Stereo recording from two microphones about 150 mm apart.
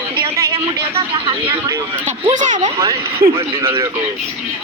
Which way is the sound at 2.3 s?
55° right (ahead or behind).